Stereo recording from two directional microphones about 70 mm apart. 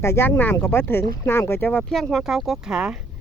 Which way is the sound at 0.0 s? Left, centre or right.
Left.